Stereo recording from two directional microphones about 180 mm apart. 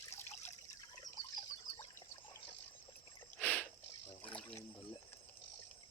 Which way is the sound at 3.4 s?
10° left (ahead or behind).